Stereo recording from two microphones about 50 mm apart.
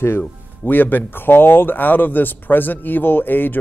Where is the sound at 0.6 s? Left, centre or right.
Left.